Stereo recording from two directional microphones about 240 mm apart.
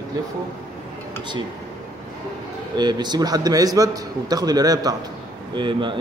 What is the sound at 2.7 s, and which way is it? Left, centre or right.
A man's voice, centre.